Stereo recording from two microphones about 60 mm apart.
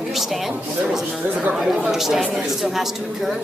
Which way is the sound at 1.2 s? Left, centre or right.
Right.